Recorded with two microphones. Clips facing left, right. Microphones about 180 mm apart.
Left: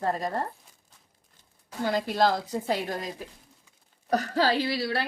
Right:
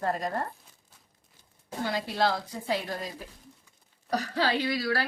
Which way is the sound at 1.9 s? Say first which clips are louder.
Left 4 dB; 45° left (ahead or behind).